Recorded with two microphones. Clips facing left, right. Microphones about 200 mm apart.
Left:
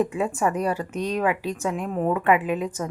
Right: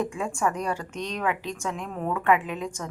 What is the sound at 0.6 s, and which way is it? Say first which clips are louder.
Speech: left 5 dB; 40° left (ahead or behind).